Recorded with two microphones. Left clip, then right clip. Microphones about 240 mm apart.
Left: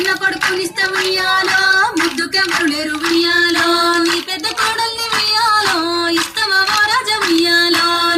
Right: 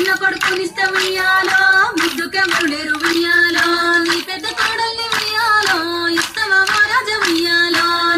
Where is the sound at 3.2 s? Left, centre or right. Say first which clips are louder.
Left 1 dB; left.